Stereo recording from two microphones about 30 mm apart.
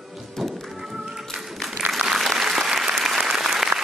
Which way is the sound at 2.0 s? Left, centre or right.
Centre.